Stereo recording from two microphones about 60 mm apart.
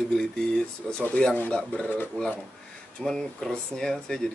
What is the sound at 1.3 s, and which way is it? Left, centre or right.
Speech, left.